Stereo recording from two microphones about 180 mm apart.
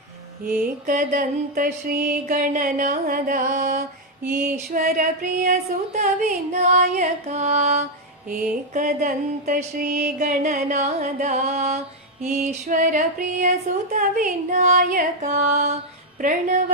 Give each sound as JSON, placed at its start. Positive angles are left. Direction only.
{"t": 0.4, "sound": "mantra", "side_deg": -50}
{"t": 4.5, "sound": "a sound", "side_deg": -45}
{"t": 8.3, "sound": "mantra", "side_deg": -50}